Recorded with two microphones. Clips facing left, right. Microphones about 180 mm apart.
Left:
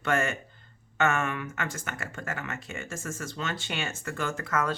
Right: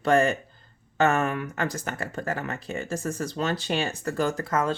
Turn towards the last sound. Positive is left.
turn(degrees=-30)  # may be behind; listen again after turning